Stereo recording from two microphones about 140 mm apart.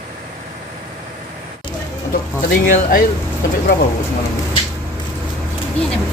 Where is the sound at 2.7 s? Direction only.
80° left.